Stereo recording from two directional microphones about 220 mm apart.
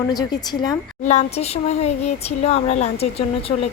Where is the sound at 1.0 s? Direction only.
30° left (ahead or behind).